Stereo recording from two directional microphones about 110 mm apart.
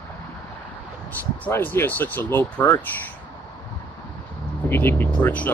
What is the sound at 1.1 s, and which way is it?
Speech, 15° left (ahead or behind).